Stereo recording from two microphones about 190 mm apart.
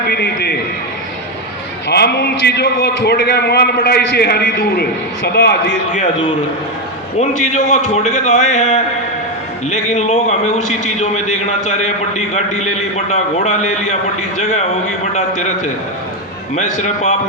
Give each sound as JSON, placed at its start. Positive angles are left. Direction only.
{"t": 0.1, "sound": "a man's voice", "side_deg": 55}
{"t": 1.9, "sound": "a man's voice", "side_deg": 60}
{"t": 7.2, "sound": "a man's voice", "side_deg": 40}